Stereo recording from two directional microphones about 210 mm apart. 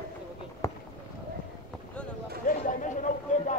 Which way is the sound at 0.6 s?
15° left (ahead or behind).